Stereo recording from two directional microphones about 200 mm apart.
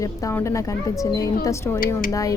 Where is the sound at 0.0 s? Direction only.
15° left (ahead or behind).